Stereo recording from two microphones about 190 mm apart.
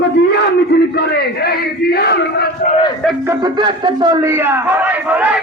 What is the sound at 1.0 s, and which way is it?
Speech, 55° left (ahead or behind).